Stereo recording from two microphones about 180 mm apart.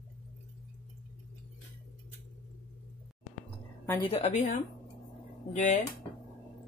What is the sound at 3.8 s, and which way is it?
Speech, 20° left (ahead or behind).